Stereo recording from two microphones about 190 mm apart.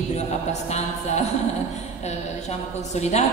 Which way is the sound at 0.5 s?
35° left (ahead or behind).